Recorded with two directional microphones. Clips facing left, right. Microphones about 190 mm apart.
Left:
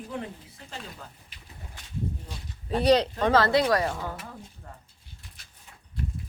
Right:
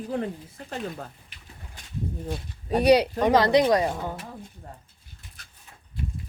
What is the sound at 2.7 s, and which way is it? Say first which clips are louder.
Speech: right 3 dB; 10° right (ahead or behind).